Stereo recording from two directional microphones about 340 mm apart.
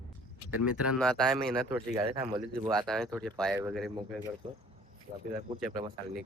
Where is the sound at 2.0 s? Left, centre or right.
Centre.